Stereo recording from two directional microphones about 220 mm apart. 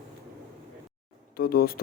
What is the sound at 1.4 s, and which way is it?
Speech, 40° left (ahead or behind).